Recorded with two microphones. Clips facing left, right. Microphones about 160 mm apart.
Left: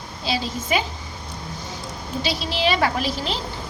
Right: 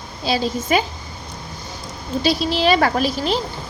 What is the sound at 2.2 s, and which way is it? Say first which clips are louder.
A woman's voice: right 5 dB; 45° right (ahead or behind).